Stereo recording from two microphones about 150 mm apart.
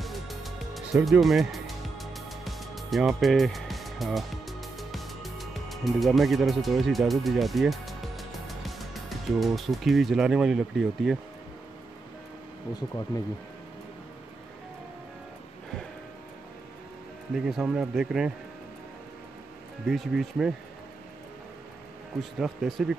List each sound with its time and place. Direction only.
0.0 s music: centre (ahead or behind)
13.1 s speech: 25° left (ahead or behind)
17.3 s speech: 5° right (ahead or behind)
19.9 s speech: centre (ahead or behind)
22.2 s speech: centre (ahead or behind)